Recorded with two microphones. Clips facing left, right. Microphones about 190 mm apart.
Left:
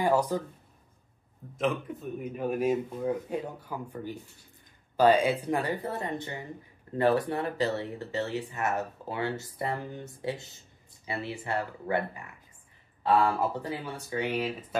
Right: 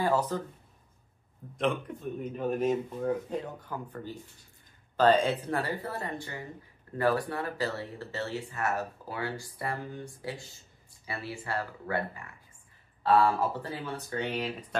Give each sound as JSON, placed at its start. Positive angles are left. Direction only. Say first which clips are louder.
{"t": 0.0, "sound": "speech", "louder": "left 2 dB", "side_deg": 15}
{"t": 1.6, "sound": "speech", "louder": "even", "side_deg": 0}